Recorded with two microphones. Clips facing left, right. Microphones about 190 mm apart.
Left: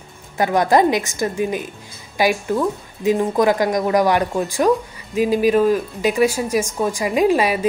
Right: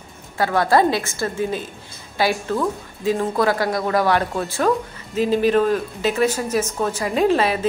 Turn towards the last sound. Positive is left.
turn(degrees=10)  # may be behind; listen again after turning